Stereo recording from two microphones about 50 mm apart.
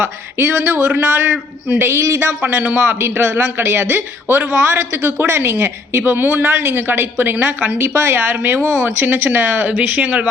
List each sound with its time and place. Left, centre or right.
0.0 s speech: right
2.0 s speech: right
2.4 s speech: right
3.0 s a woman's voice: right
6.1 s speech: right
8.2 s speech: right
9.8 s speech: right